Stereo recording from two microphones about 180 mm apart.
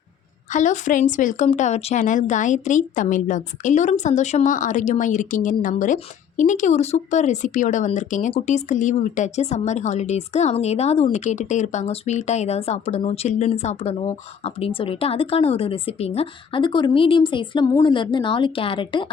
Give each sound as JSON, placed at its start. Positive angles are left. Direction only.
{"t": 0.5, "sound": "a woman's voice", "side_deg": 40}